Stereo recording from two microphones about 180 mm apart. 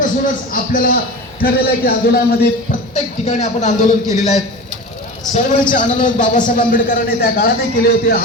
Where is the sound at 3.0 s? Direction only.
40° left (ahead or behind).